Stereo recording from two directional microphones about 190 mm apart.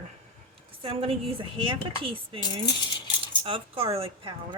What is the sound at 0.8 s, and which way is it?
Speech, 30° right (ahead or behind).